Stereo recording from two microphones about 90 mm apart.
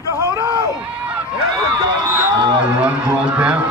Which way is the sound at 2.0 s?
20° right (ahead or behind).